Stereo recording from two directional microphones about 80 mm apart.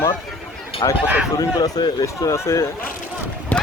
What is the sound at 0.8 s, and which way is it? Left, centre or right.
Speech, left.